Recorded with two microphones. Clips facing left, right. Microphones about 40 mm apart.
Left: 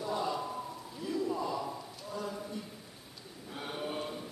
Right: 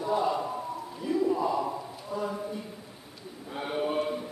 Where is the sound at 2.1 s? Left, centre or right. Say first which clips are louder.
Right 7 dB; centre.